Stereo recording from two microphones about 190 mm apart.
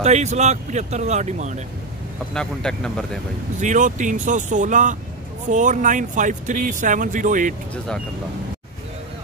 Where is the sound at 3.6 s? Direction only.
40° right (ahead or behind).